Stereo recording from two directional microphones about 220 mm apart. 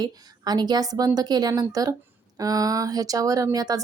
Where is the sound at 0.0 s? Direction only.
15° right (ahead or behind).